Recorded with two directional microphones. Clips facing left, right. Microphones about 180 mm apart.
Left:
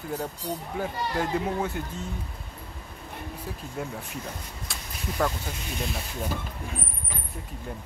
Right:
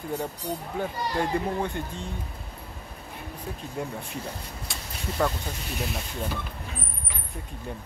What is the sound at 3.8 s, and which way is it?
Speech, 5° left (ahead or behind).